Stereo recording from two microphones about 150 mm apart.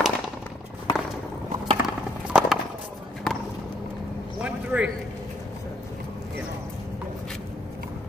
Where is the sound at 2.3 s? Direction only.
5° right (ahead or behind).